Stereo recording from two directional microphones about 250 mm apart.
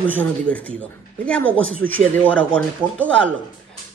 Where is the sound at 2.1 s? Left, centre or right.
Centre.